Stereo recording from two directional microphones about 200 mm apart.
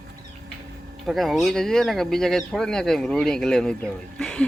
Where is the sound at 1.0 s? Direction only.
Centre (ahead or behind).